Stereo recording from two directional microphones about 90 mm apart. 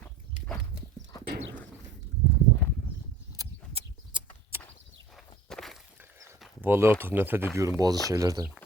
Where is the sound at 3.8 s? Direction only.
90° right.